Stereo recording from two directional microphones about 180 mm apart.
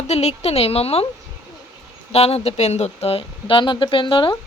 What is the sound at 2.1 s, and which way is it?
Speech, 35° left (ahead or behind).